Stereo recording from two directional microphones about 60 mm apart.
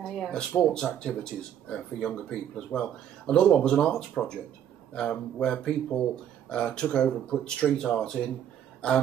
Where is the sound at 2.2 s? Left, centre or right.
Centre.